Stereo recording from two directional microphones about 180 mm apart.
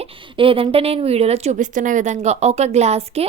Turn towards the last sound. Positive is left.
turn(degrees=-35)  # may be behind; listen again after turning